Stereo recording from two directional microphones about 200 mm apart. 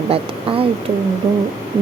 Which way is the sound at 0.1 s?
25° right (ahead or behind).